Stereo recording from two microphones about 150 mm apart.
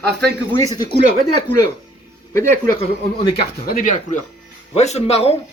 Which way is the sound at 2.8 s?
35° left (ahead or behind).